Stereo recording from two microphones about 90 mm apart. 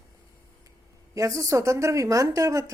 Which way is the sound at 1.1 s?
35° right (ahead or behind).